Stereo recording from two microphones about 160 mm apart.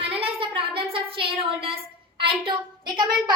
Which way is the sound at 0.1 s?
35° right (ahead or behind).